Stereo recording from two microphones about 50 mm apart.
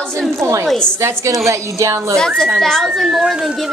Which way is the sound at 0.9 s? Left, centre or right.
Right.